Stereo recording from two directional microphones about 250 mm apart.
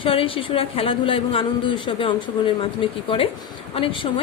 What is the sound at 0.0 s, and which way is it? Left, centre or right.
Speech, left.